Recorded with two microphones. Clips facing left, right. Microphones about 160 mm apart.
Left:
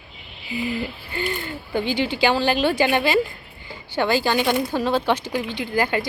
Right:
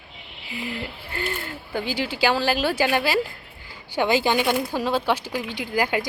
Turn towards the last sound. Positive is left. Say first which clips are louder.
# left 1 dB
turn(degrees=-10)  # may be behind; listen again after turning